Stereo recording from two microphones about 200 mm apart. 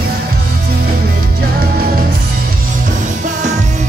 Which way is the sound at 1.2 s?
50° right (ahead or behind).